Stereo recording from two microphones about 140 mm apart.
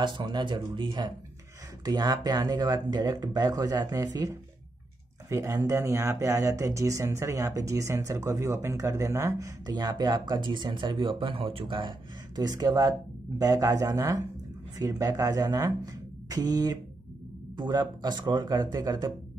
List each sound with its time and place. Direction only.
0.0 s speech: 30° right (ahead or behind)